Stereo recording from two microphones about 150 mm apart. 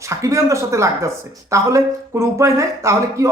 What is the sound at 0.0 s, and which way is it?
Speech, 20° right (ahead or behind).